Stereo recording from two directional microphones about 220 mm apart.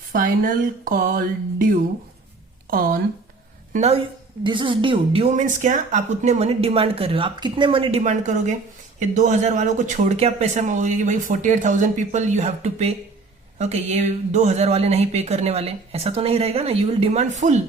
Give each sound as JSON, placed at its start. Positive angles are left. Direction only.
{"t": 0.1, "sound": "speech", "side_deg": -40}
{"t": 3.7, "sound": "a woman's voice", "side_deg": -30}